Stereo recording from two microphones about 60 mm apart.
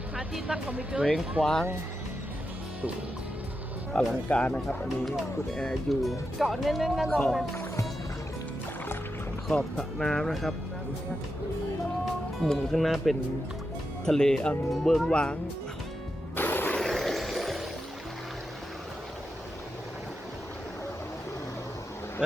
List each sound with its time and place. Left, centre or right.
0.4 s speech: right
1.4 s speech: centre
3.9 s speech: centre
5.0 s speech: centre
7.1 s speech: centre
9.5 s speech: centre
12.4 s speech: centre
15.1 s speech: centre
16.3 s music: left
16.7 s a sound: centre